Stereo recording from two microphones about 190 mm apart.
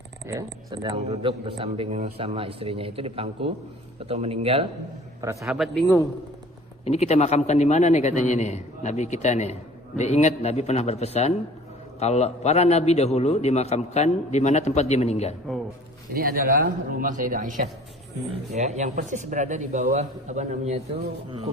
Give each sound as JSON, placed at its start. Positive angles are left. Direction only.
{"t": 0.3, "sound": "a man's voice", "side_deg": -25}
{"t": 5.2, "sound": "speech", "side_deg": -15}
{"t": 5.5, "sound": "speech", "side_deg": 0}
{"t": 6.8, "sound": "a man's voice", "side_deg": 35}
{"t": 16.1, "sound": "a man's voice", "side_deg": -50}